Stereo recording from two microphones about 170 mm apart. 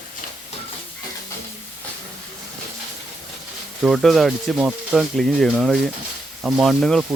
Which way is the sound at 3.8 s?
Centre (ahead or behind).